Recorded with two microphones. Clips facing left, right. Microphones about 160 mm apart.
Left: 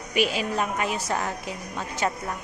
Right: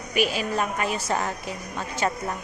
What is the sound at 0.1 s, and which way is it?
Speech, 25° left (ahead or behind).